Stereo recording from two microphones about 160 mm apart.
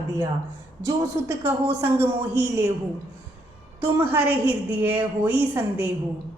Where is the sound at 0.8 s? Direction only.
20° right (ahead or behind).